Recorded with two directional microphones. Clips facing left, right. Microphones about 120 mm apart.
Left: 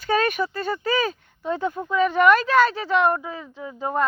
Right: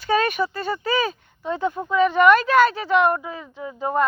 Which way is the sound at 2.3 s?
35° left (ahead or behind).